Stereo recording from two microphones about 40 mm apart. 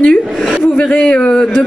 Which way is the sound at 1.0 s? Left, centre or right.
Left.